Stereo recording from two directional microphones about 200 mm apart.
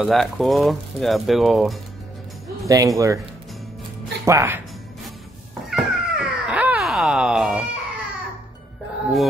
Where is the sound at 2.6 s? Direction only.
15° right (ahead or behind).